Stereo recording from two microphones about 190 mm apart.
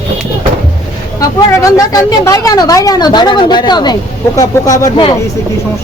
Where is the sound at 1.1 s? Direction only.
15° left (ahead or behind).